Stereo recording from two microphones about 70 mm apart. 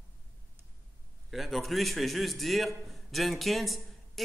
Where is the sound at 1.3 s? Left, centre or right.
Centre.